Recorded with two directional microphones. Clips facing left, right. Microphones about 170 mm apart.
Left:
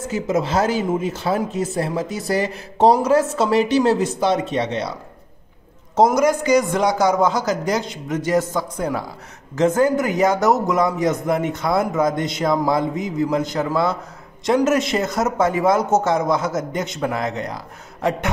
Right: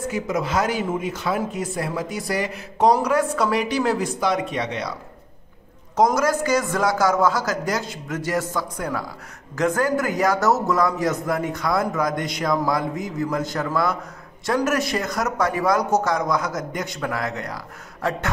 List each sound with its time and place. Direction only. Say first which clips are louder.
0.1 s speech: left 5 dB; 30° left (ahead or behind)
6.1 s speech: left 4 dB; 20° left (ahead or behind)